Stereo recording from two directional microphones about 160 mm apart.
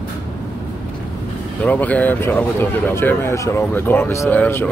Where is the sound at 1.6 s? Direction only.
10° left (ahead or behind).